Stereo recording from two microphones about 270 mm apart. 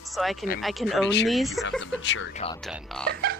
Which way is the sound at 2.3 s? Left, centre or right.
Left.